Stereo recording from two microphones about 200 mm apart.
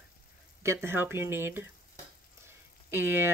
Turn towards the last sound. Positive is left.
turn(degrees=-10)  # may be behind; listen again after turning